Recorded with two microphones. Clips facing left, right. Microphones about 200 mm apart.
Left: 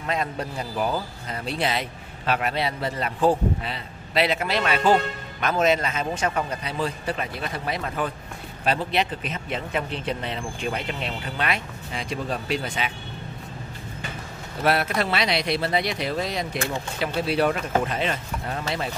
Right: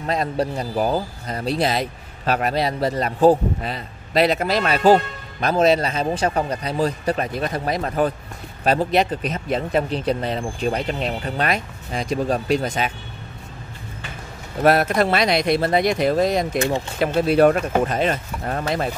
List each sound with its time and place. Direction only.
0.0 s speech: 35° right (ahead or behind)
14.6 s speech: 45° right (ahead or behind)